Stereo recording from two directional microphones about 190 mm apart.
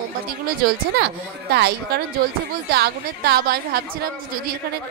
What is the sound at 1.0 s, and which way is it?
A woman's voice, 60° right (ahead or behind).